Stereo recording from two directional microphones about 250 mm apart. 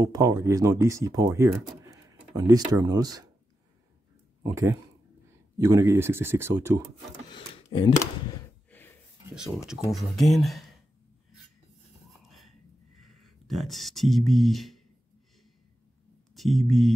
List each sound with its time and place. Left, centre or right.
0.0 s speech: centre
4.4 s speech: centre
7.2 s speech: centre
8.6 s a sound: centre
9.3 s speech: centre
12.1 s whispering: centre
13.0 s speech: centre
16.3 s speech: centre